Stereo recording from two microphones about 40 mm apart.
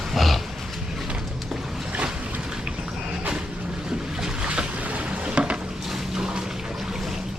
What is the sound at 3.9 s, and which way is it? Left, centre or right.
Boat, right.